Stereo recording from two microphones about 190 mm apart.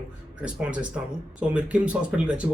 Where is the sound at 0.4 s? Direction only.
5° right (ahead or behind).